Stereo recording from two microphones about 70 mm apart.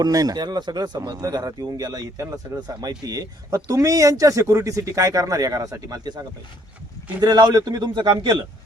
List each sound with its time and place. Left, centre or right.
0.0 s a man's voice: right
2.6 s a man's voice: right
7.2 s a man's voice: right